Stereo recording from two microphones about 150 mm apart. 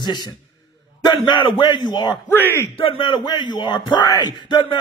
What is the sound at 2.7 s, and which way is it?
Speech, 35° left (ahead or behind).